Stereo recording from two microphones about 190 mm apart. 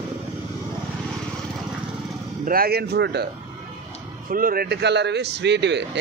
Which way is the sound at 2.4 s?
50° right (ahead or behind).